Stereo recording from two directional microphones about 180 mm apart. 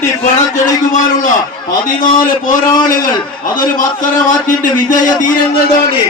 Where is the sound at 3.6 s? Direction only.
50° left (ahead or behind).